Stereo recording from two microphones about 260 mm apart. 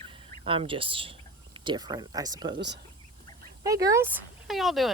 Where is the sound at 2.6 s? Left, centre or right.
Right.